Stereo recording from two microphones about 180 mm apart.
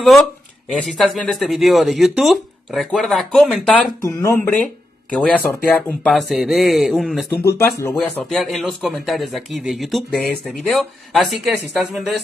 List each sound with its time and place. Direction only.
0.8 s a man's voice: centre (ahead or behind)
4.0 s a man's voice: 15° left (ahead or behind); by 7.2 s centre (ahead or behind)
7.4 s speech: 15° left (ahead or behind)
7.9 s a man's voice: 5° left (ahead or behind)